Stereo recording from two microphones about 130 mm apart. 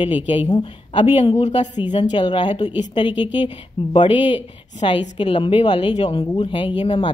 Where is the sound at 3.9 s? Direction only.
40° left (ahead or behind).